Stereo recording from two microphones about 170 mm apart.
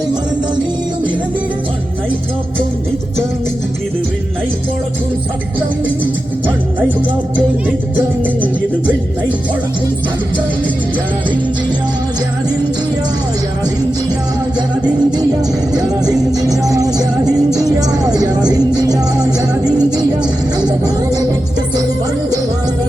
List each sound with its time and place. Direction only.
7.9 s music: 10° right (ahead or behind)
14.8 s music: 25° right (ahead or behind)